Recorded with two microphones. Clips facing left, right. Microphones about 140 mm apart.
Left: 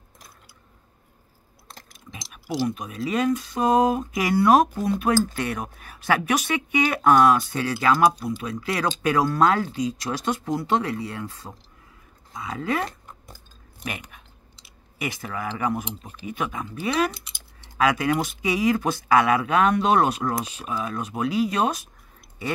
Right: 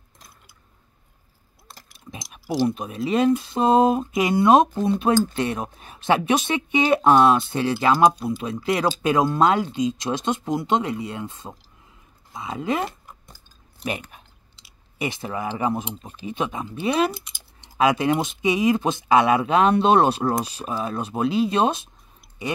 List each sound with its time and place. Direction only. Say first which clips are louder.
2.3 s speech: right 4 dB; 30° right (ahead or behind)
14.1 s clicking: right 1 dB; 25° right (ahead or behind)
16.0 s speech: right 2 dB; 25° right (ahead or behind)
22.4 s chewing: right 1 dB; 15° right (ahead or behind)